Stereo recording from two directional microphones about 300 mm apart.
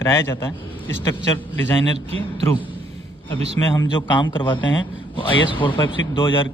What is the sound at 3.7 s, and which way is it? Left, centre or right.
A man's voice, centre.